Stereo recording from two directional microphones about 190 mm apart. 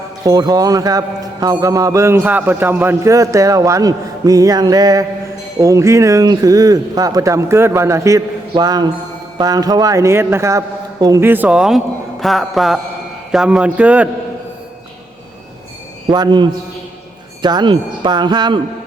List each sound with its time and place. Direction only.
0.3 s a man's voice: 20° right (ahead or behind)
16.0 s speech: 20° right (ahead or behind)